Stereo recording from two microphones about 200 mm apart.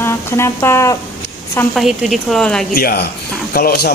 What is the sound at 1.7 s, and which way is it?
Speech, centre (ahead or behind).